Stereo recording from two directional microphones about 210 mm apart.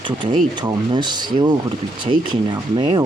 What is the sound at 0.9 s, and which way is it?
Speech, 20° right (ahead or behind).